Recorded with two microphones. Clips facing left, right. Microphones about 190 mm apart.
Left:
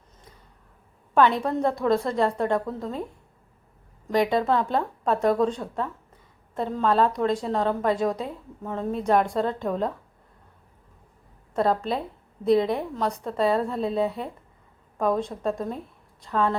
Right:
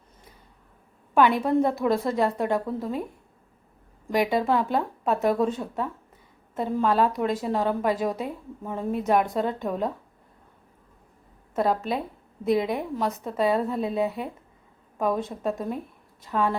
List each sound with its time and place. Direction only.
1.5 s a woman's voice: 20° right (ahead or behind)
1.7 s a woman's voice: 5° right (ahead or behind)
11.5 s a woman's voice: 5° right (ahead or behind)